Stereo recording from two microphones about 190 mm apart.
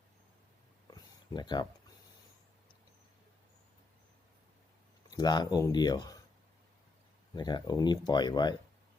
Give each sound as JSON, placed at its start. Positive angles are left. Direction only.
{"t": 0.9, "sound": "a sound", "side_deg": 20}
{"t": 5.1, "sound": "speech", "side_deg": 20}
{"t": 7.3, "sound": "speech", "side_deg": 20}